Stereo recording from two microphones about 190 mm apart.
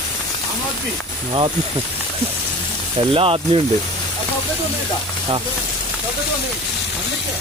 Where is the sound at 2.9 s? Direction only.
30° right (ahead or behind).